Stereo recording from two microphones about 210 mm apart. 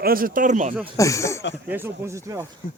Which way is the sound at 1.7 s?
10° right (ahead or behind).